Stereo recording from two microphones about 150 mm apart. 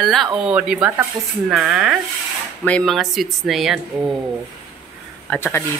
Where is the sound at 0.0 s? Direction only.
Centre (ahead or behind).